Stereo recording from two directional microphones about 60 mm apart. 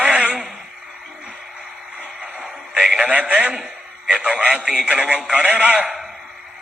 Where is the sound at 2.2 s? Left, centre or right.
Centre.